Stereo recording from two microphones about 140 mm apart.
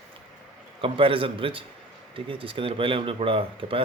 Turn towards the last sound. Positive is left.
turn(degrees=-40)  # may be behind; listen again after turning